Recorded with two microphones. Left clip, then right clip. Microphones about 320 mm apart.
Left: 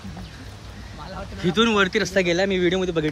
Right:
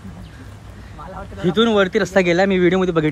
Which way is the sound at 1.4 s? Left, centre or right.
Centre.